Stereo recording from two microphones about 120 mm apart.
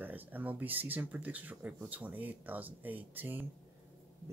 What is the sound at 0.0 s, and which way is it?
Speech, 15° right (ahead or behind).